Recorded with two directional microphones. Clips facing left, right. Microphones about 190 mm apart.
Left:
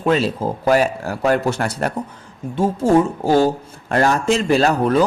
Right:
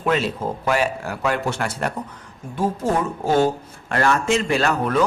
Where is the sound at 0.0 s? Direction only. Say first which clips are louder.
Left 4 dB; 35° left (ahead or behind).